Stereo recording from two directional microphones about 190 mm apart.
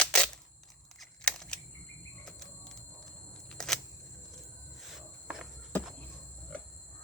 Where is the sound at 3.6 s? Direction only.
5° left (ahead or behind).